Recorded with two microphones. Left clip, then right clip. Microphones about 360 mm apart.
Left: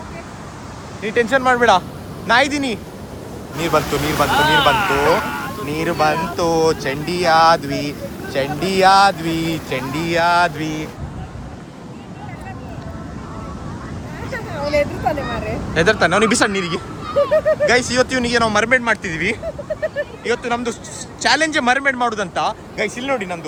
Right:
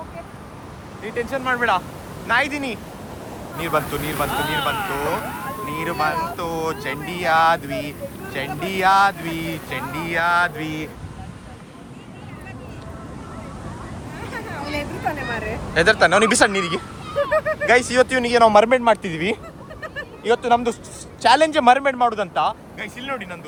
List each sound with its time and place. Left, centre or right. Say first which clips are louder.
1.0 s speech: left 9 dB; left
1.5 s speech: left 3 dB; centre
4.8 s speech: left 8 dB; left
5.6 s speech: left 5 dB; centre
14.6 s vehicle: left 11 dB; right
15.7 s speech: even; centre